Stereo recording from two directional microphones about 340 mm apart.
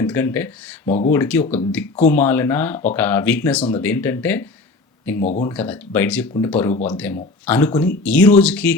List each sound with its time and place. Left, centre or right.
0.0 s speech: centre
5.1 s speech: left
5.4 s speech: centre